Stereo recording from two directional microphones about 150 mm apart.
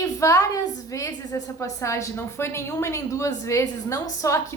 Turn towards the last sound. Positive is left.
turn(degrees=20)  # may be behind; listen again after turning